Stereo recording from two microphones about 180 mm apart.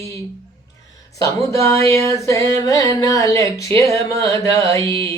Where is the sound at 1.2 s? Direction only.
15° left (ahead or behind).